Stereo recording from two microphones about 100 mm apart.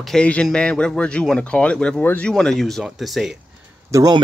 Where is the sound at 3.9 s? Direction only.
35° right (ahead or behind).